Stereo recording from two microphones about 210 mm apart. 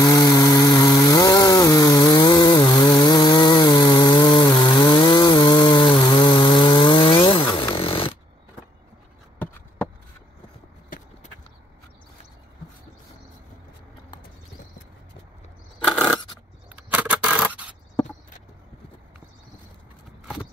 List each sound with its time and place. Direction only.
0.1 s chainsaw: 15° left (ahead or behind)
7.7 s snoring: 25° left (ahead or behind)
15.9 s scissors: centre (ahead or behind)
16.9 s a sound: 5° right (ahead or behind)